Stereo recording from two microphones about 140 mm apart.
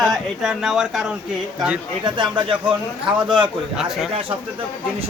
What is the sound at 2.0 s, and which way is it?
Speech, 35° right (ahead or behind).